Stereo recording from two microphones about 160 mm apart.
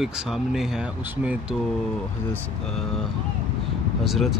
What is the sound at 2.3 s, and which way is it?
Speech, 5° left (ahead or behind).